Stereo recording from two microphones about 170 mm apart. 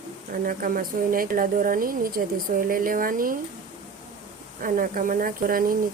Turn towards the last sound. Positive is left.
turn(degrees=-55)  # may be behind; listen again after turning